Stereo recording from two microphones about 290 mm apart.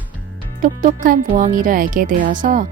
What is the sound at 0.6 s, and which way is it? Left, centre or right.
Speech, right.